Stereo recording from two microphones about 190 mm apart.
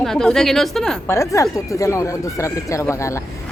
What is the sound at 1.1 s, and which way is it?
A woman's voice, 15° left (ahead or behind).